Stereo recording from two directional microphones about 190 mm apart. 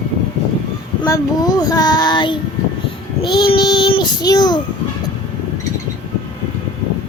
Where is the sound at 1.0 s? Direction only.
20° left (ahead or behind).